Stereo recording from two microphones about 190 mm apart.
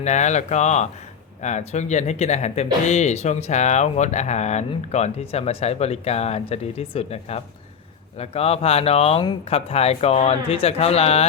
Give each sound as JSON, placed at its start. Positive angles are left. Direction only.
{"t": 0.0, "sound": "speech", "side_deg": 40}